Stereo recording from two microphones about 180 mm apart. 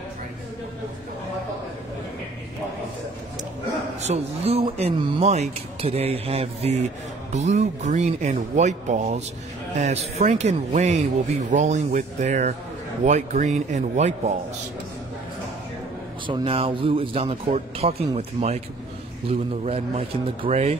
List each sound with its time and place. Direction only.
4.0 s speech: 35° right (ahead or behind)
16.3 s speech: 30° right (ahead or behind)